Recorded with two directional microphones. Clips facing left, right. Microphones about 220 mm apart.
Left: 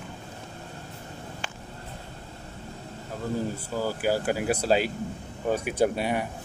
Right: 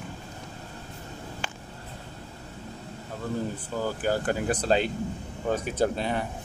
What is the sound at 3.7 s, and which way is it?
Speech, 10° left (ahead or behind).